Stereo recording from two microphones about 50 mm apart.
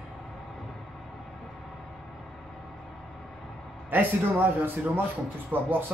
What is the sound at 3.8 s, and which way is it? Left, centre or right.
Speech, right.